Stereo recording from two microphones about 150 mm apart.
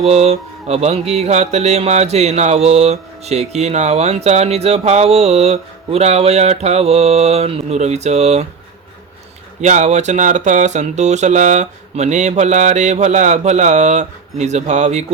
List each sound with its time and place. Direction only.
0.0 s mantra: 45° right (ahead or behind)
9.6 s mantra: 50° right (ahead or behind)